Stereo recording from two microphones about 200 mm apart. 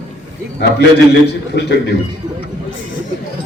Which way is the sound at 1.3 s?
55° left (ahead or behind).